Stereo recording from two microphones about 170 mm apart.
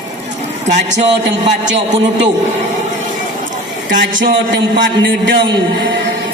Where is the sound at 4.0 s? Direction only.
90° right.